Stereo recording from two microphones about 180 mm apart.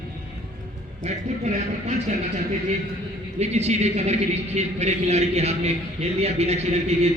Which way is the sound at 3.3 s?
35° right (ahead or behind).